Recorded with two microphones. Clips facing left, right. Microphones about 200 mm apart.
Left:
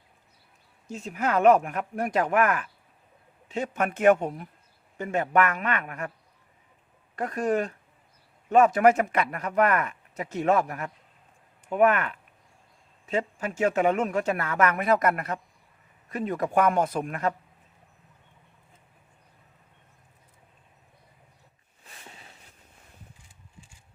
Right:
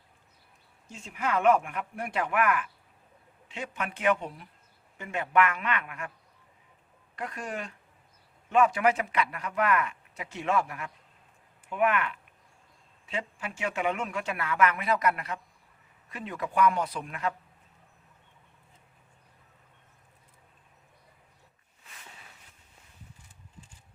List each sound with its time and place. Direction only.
0.9 s speech: 40° left (ahead or behind)
7.2 s speech: 45° left (ahead or behind)
21.8 s a sound: 30° left (ahead or behind)